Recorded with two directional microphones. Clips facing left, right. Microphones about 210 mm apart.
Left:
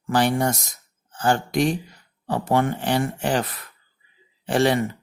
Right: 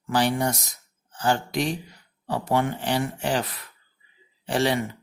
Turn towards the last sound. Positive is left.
turn(degrees=50)  # may be behind; listen again after turning